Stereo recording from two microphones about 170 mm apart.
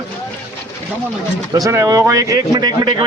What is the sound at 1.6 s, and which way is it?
Speech, 20° right (ahead or behind).